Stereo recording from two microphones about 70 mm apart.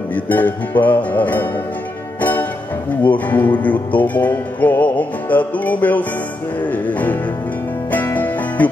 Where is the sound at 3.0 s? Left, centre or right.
Left.